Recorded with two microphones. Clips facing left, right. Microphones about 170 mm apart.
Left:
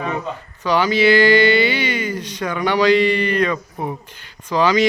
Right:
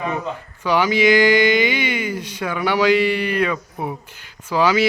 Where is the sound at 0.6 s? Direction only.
10° right (ahead or behind).